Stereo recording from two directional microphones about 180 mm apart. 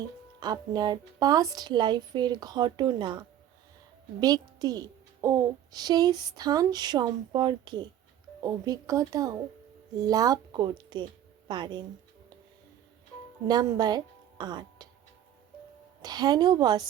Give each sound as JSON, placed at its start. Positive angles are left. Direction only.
{"t": 0.3, "sound": "a child's voice", "side_deg": -25}
{"t": 13.5, "sound": "a woman's voice", "side_deg": -20}
{"t": 16.0, "sound": "a child's voice", "side_deg": -20}